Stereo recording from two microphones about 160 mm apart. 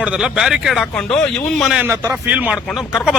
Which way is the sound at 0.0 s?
5° right (ahead or behind).